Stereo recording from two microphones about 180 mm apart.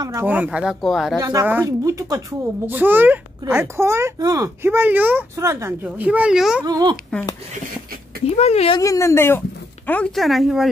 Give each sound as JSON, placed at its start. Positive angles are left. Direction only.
{"t": 0.0, "sound": "speech", "side_deg": -15}
{"t": 1.2, "sound": "speech", "side_deg": -15}
{"t": 6.6, "sound": "a child's voice", "side_deg": -20}
{"t": 8.4, "sound": "speech", "side_deg": 35}
{"t": 8.7, "sound": "speech", "side_deg": 20}